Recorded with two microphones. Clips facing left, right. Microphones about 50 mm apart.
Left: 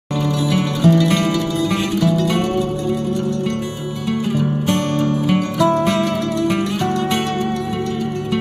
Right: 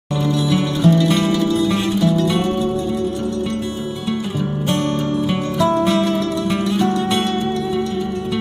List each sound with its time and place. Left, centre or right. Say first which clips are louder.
1.0 s music: right 1 dB; left
5.3 s music: left 2 dB; left